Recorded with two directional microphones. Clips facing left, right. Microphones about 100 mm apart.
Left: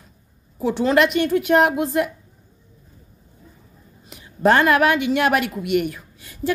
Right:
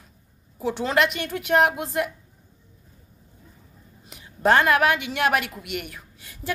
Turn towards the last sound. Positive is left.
turn(degrees=0)  # may be behind; listen again after turning